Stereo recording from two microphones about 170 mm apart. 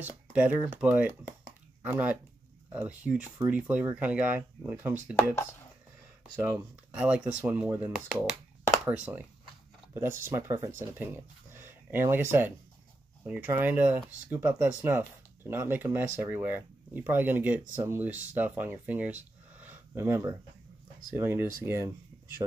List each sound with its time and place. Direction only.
0.0 s speech: 10° right (ahead or behind)
6.4 s speech: 10° right (ahead or behind)
19.5 s a sound: 10° right (ahead or behind)
21.1 s speech: 15° right (ahead or behind)